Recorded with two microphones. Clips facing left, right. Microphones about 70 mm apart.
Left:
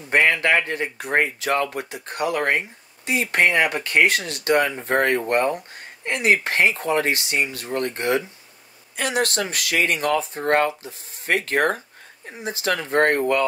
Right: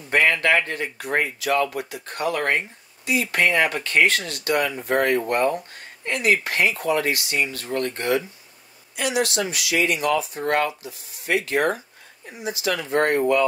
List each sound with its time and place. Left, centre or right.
0.1 s speech: left
3.1 s speech: left
4.3 s speech: left
5.2 s speech: left
8.9 s speech: left